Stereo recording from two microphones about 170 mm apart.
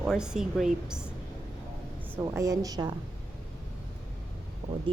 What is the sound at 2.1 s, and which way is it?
Speech, 15° right (ahead or behind).